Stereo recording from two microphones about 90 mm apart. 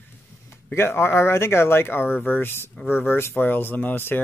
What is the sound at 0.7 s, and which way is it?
Speech, 25° left (ahead or behind).